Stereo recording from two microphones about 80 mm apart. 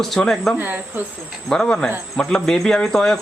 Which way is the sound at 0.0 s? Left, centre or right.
Centre.